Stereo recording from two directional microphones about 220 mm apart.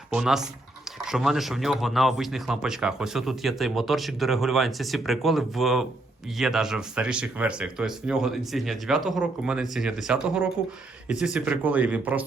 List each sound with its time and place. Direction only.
0.1 s speech: centre (ahead or behind)